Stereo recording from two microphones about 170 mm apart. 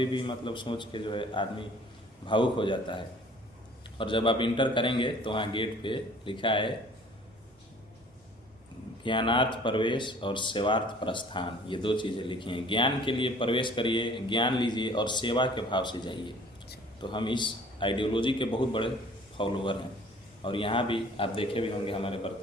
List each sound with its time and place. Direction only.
0.0 s speech: 30° left (ahead or behind)
9.0 s a man's voice: 30° left (ahead or behind)